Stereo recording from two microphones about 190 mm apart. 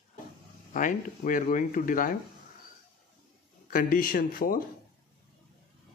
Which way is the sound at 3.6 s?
50° left (ahead or behind).